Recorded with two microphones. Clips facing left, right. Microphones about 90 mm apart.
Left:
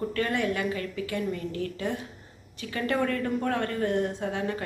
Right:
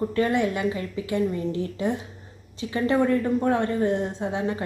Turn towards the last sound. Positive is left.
turn(degrees=-20)  # may be behind; listen again after turning